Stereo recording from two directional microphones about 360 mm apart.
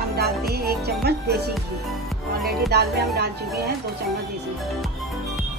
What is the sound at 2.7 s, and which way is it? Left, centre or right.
Speech, right.